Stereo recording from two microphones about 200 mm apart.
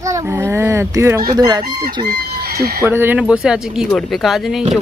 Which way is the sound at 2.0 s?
50° right (ahead or behind).